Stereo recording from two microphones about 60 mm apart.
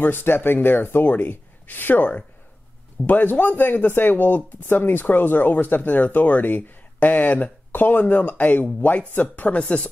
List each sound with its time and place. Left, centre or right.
0.0 s speech: left
3.1 s speech: left